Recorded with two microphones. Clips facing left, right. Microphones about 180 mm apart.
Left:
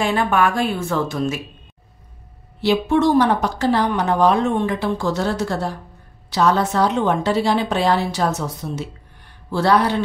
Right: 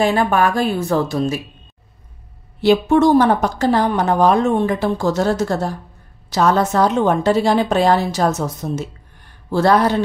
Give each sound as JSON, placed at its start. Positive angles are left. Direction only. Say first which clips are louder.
{"t": 0.0, "sound": "a woman's voice", "louder": "right 3 dB", "side_deg": -40}
{"t": 2.6, "sound": "a woman's voice", "louder": "right 4 dB", "side_deg": -45}